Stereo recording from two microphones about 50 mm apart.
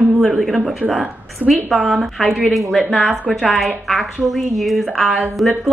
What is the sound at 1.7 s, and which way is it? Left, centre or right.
A woman's voice, centre.